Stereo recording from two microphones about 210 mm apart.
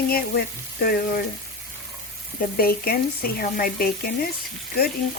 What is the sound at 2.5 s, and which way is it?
Speech, 45° left (ahead or behind).